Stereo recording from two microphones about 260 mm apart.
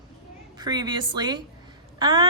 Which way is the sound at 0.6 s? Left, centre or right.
Centre.